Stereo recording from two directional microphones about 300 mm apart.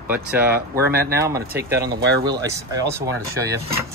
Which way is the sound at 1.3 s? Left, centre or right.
Centre.